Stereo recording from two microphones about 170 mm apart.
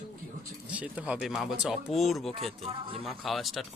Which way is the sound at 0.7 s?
10° right (ahead or behind).